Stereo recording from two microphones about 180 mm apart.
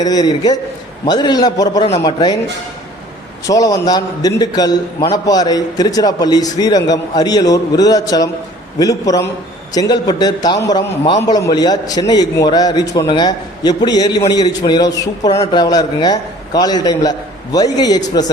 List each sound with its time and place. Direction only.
0.0 s a man's voice: 20° left (ahead or behind)
3.4 s a man's voice: 20° left (ahead or behind)